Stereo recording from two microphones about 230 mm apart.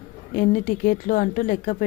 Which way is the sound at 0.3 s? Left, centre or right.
Left.